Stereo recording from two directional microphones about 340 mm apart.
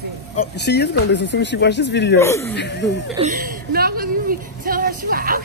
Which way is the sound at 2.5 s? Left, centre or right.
Left.